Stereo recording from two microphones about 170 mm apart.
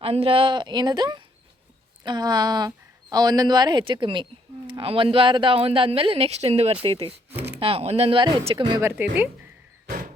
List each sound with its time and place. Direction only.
0.0 s speech: 35° right (ahead or behind)
8.8 s speech: 10° right (ahead or behind)